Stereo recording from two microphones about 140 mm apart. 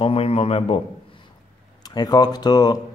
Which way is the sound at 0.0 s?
45° left (ahead or behind).